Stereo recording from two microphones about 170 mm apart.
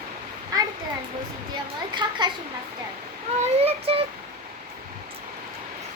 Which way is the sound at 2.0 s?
25° right (ahead or behind).